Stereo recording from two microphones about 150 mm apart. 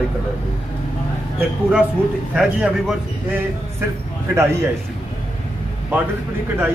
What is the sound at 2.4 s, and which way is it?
A man's voice, 5° right (ahead or behind).